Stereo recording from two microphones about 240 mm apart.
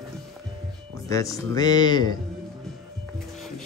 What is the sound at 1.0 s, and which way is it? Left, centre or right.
Speech, centre.